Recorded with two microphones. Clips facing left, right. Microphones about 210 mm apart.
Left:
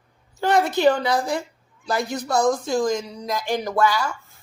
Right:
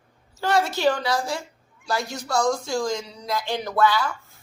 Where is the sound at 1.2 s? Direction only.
55° left (ahead or behind).